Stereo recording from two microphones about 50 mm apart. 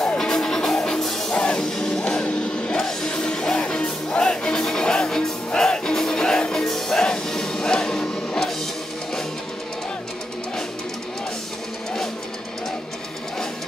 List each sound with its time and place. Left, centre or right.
0.2 s music: centre